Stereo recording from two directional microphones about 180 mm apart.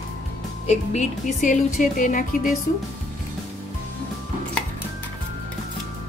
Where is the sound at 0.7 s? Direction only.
45° left (ahead or behind).